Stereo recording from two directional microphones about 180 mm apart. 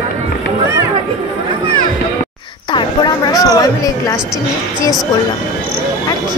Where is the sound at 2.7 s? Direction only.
20° left (ahead or behind).